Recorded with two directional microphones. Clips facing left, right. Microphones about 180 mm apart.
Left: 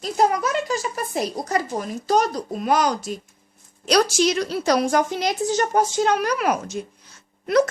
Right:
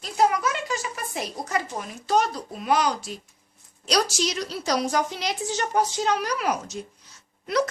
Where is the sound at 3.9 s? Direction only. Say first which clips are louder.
Left 6 dB; 55° left (ahead or behind).